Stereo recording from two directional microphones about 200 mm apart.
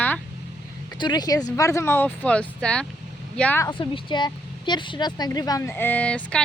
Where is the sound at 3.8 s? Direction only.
25° left (ahead or behind).